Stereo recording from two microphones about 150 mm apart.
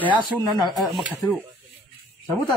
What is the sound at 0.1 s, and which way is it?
Speech, 35° right (ahead or behind).